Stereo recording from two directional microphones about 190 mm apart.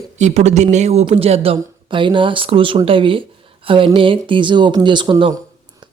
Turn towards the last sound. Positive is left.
turn(degrees=-25)  # may be behind; listen again after turning